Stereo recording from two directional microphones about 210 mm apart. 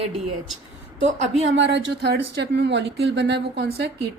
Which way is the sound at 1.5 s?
60° right (ahead or behind).